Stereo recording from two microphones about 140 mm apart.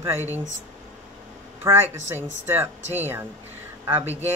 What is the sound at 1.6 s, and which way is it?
Speech, 15° right (ahead or behind).